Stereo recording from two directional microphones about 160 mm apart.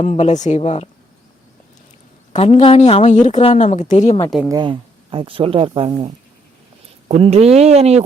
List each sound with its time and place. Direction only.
0.0 s a woman's voice: 45° left (ahead or behind)
2.3 s a woman's voice: 45° left (ahead or behind)
4.4 s speech: 25° right (ahead or behind); by 8.0 s 40° right (ahead or behind)